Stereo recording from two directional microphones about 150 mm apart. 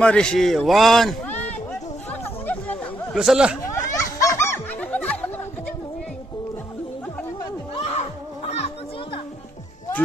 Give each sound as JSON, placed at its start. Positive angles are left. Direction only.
{"t": 0.0, "sound": "a man's voice", "side_deg": 5}
{"t": 2.2, "sound": "chatter", "side_deg": 10}
{"t": 3.2, "sound": "a man's voice", "side_deg": -5}
{"t": 3.7, "sound": "snicker", "side_deg": 20}
{"t": 7.7, "sound": "a sound", "side_deg": 45}
{"t": 8.5, "sound": "children playing", "side_deg": 45}